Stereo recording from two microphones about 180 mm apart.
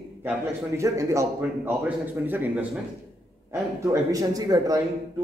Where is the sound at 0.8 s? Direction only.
15° right (ahead or behind).